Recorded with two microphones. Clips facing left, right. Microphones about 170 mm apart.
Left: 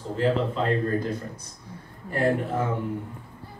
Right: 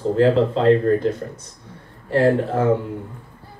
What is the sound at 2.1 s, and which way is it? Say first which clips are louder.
Speech: right 7 dB; 85° right.